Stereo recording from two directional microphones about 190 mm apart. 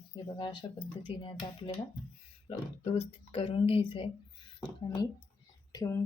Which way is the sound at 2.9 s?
30° left (ahead or behind).